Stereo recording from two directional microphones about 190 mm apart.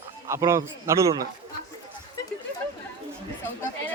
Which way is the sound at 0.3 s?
15° right (ahead or behind).